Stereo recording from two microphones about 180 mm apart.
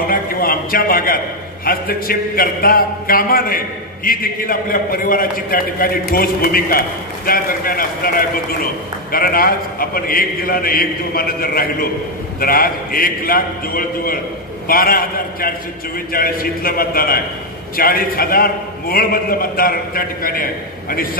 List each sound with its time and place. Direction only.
0.0 s a man's voice: 55° left (ahead or behind)